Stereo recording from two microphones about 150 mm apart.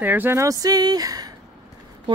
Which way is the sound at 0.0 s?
10° right (ahead or behind).